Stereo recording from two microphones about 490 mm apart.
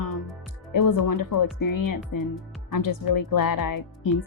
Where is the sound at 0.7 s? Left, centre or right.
Left.